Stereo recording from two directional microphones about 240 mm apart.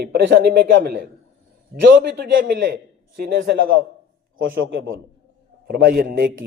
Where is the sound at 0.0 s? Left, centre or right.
Right.